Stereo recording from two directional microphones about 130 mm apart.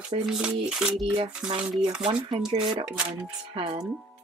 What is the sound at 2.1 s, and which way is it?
Speech, 40° right (ahead or behind).